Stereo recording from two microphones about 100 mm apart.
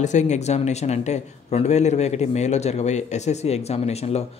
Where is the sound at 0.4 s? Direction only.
90° left.